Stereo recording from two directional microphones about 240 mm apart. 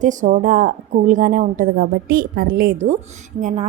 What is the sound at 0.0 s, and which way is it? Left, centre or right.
A woman's voice, right.